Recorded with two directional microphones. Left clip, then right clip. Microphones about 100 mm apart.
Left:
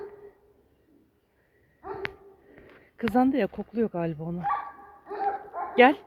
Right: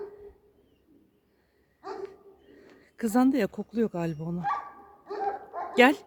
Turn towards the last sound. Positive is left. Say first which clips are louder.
# left 2 dB
turn(degrees=-45)  # may be behind; listen again after turning